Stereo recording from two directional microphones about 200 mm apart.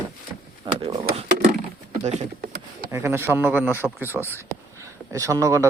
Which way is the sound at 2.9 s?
15° right (ahead or behind).